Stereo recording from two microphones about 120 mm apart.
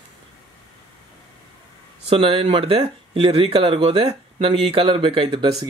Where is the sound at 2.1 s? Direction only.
50° right (ahead or behind).